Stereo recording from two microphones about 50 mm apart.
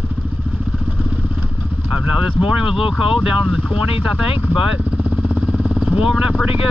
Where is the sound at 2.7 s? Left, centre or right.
Centre.